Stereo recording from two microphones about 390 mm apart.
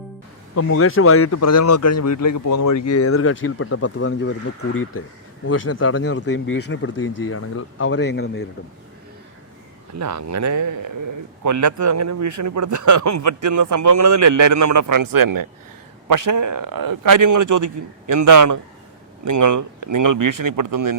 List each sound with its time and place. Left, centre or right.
0.5 s speech: left
9.9 s a man's voice: right